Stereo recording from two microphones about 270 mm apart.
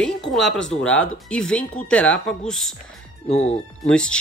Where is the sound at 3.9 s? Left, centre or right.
Centre.